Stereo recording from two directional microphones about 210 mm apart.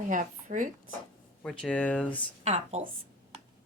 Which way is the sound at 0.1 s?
40° right (ahead or behind).